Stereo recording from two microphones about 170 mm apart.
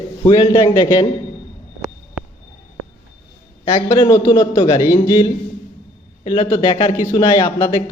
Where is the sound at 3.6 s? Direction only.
25° left (ahead or behind).